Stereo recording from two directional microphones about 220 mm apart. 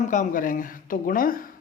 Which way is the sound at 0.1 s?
35° left (ahead or behind).